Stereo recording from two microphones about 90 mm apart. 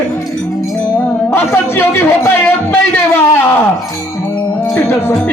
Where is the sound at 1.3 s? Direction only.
25° left (ahead or behind).